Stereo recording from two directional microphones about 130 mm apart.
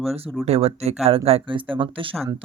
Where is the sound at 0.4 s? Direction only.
50° right (ahead or behind).